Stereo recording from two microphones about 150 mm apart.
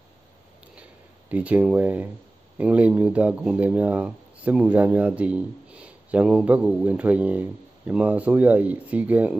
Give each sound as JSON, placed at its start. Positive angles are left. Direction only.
{"t": 1.3, "sound": "speech", "side_deg": -10}